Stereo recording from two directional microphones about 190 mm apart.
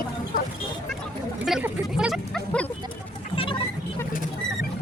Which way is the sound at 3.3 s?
30° left (ahead or behind).